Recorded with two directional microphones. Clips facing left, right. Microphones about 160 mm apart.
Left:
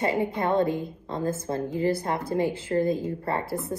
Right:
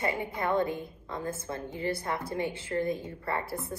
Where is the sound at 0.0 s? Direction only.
30° left (ahead or behind).